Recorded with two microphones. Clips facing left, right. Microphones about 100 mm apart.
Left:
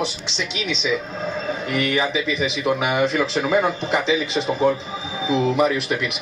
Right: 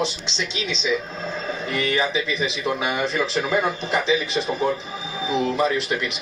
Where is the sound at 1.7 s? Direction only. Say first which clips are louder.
Left 1 dB; 15° left (ahead or behind).